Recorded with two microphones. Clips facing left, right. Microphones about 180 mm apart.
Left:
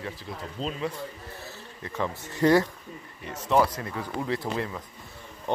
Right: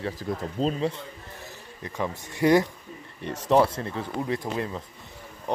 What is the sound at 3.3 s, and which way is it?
Speech, 30° right (ahead or behind).